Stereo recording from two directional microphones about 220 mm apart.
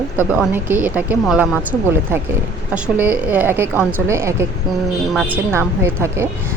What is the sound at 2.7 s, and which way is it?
A woman's voice, 5° right (ahead or behind).